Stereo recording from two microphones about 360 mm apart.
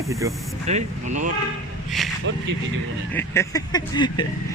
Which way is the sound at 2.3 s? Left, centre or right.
Right.